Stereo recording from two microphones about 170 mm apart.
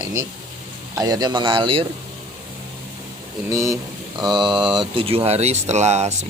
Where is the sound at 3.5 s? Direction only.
20° right (ahead or behind).